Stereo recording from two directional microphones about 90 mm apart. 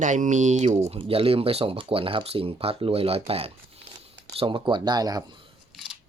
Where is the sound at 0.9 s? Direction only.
90° right.